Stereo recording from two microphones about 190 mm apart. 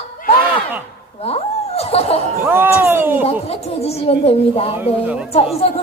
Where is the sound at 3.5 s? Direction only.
30° left (ahead or behind).